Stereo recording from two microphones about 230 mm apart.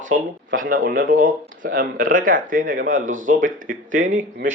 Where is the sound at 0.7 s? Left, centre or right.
Right.